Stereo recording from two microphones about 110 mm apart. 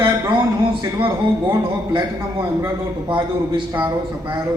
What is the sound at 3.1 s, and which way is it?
Speech, 50° right (ahead or behind).